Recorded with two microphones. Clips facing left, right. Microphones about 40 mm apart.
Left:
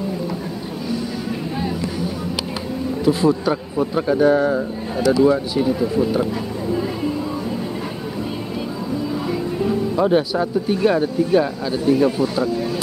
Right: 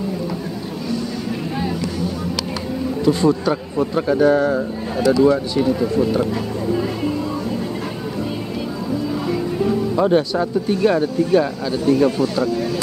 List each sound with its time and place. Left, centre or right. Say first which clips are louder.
3.1 s a man's voice: even; centre
9.3 s speech: right 2 dB; centre